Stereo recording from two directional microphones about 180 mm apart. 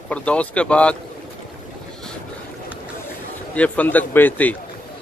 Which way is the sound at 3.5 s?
10° left (ahead or behind).